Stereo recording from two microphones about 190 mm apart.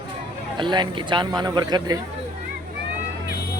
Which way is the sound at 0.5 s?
25° right (ahead or behind).